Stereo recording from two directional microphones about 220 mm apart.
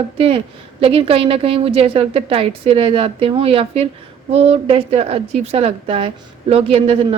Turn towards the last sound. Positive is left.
turn(degrees=-25)  # may be behind; listen again after turning